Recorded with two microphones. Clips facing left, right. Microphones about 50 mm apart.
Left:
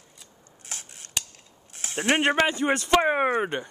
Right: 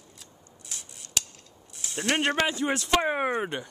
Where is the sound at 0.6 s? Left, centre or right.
Left.